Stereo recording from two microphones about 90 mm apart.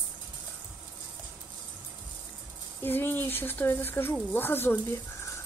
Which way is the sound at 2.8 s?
25° left (ahead or behind).